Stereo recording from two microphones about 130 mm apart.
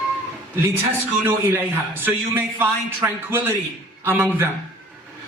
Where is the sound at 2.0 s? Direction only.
15° right (ahead or behind).